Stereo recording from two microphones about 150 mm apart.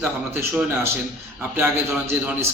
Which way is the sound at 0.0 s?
15° right (ahead or behind).